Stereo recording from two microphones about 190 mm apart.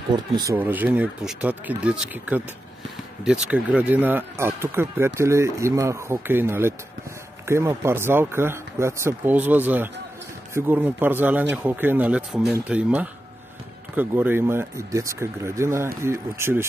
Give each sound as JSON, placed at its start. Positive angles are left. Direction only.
{"t": 0.1, "sound": "speech", "side_deg": -20}
{"t": 0.6, "sound": "speech", "side_deg": -10}